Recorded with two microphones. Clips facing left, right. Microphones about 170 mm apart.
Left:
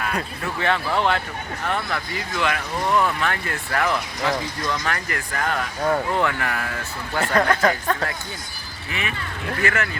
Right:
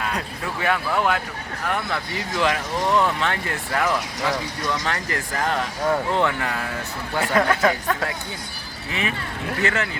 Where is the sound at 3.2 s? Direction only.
20° right (ahead or behind).